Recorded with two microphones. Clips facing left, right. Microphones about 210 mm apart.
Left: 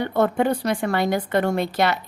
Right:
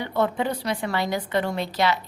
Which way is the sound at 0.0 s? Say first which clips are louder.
Left 4 dB; 50° left (ahead or behind).